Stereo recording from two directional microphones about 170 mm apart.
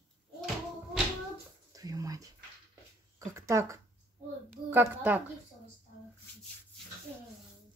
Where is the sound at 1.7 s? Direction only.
20° right (ahead or behind).